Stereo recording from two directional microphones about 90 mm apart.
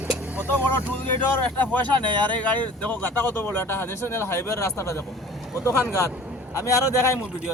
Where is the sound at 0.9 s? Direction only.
20° left (ahead or behind).